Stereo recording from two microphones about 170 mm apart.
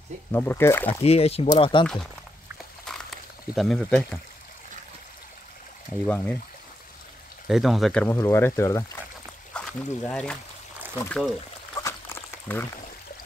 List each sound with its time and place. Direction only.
0.3 s speech: 15° left (ahead or behind)
1.0 s speech: 35° left (ahead or behind)
2.9 s a sound: 5° left (ahead or behind)
3.5 s speech: 5° left (ahead or behind)
6.0 s speech: 10° left (ahead or behind)
7.4 s speech: centre (ahead or behind); by 8.8 s 15° left (ahead or behind)
9.5 s speech: 5° left (ahead or behind)
11.7 s a sound: 15° left (ahead or behind)